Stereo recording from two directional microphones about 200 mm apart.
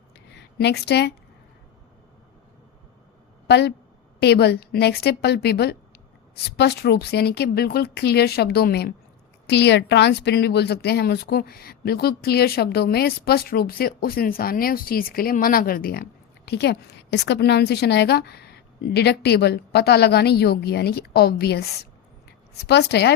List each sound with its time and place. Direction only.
0.3 s speech: 55° left (ahead or behind)
3.4 s a woman's voice: 55° left (ahead or behind)